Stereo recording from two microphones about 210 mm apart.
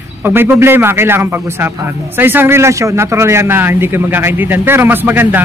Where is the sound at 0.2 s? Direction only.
10° right (ahead or behind).